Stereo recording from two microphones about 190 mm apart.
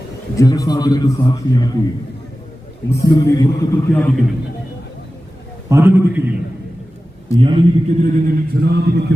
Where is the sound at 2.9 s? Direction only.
20° left (ahead or behind).